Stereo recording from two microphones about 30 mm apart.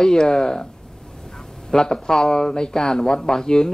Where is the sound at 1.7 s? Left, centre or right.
Centre.